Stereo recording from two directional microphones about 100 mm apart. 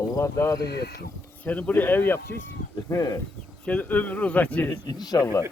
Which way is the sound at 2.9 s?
35° left (ahead or behind).